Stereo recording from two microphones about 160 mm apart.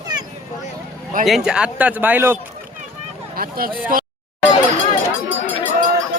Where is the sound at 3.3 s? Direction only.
65° right (ahead or behind).